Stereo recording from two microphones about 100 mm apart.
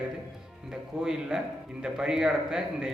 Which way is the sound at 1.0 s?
5° right (ahead or behind).